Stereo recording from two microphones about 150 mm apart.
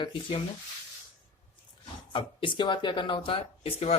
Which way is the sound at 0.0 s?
35° left (ahead or behind).